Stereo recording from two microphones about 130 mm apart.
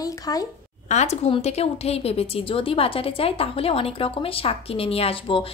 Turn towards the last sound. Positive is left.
turn(degrees=45)  # may be behind; listen again after turning